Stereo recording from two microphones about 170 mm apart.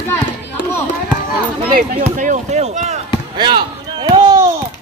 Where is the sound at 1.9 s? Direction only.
50° right (ahead or behind).